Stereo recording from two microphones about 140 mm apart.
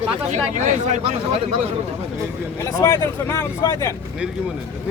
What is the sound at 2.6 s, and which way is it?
Speech, 20° left (ahead or behind).